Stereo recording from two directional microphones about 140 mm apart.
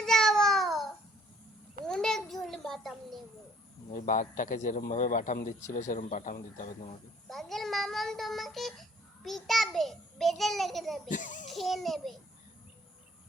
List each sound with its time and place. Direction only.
0.0 s a sound: 5° left (ahead or behind)
1.8 s babbling: 5° left (ahead or behind)
3.9 s speech: 70° left (ahead or behind)
7.3 s child singing: centre (ahead or behind)
11.1 s children playing: 65° left (ahead or behind)
11.4 s a child's voice: centre (ahead or behind)